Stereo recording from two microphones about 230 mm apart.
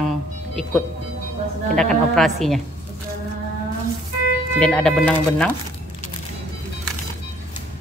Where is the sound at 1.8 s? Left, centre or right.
Centre.